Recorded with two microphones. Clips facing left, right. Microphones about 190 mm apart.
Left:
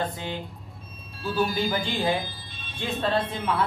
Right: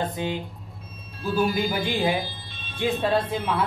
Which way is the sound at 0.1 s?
15° right (ahead or behind).